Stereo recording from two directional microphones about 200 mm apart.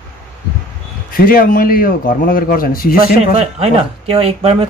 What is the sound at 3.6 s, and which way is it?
Speech, 30° right (ahead or behind).